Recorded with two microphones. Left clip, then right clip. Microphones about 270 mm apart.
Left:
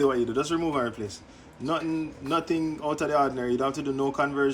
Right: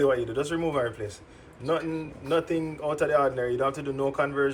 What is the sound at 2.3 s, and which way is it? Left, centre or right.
Speech, centre.